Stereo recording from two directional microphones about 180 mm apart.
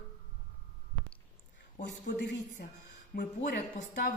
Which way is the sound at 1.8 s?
70° left (ahead or behind).